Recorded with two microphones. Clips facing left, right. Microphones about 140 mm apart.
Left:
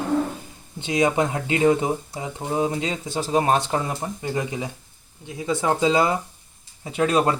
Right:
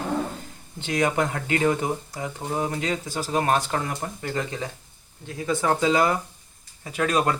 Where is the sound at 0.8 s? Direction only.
15° left (ahead or behind).